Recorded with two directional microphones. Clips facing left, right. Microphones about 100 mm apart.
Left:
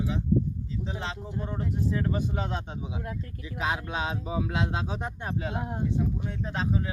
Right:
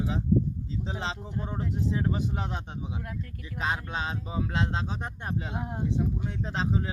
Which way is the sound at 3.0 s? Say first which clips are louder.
Left 2 dB; 25° left (ahead or behind).